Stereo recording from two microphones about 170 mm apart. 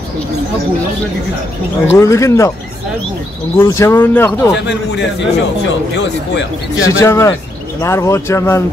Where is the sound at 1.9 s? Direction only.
15° left (ahead or behind).